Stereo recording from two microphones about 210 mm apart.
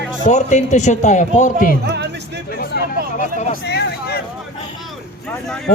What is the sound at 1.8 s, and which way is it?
Music, 50° right (ahead or behind).